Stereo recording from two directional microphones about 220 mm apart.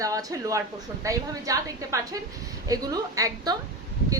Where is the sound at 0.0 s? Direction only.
15° right (ahead or behind).